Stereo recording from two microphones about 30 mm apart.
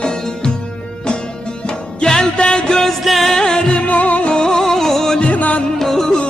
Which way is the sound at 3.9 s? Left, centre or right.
Left.